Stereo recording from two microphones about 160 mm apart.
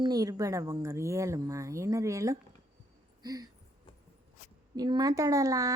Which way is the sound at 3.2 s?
25° right (ahead or behind).